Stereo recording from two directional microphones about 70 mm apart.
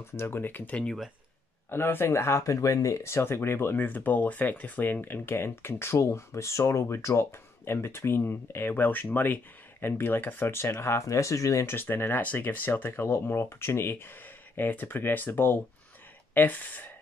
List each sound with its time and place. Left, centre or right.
0.0 s speech: left
0.8 s speech: centre
1.7 s speech: left
11.6 s speech: left